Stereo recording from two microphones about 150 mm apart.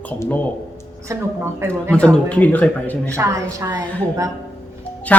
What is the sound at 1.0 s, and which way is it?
Speech, 15° right (ahead or behind).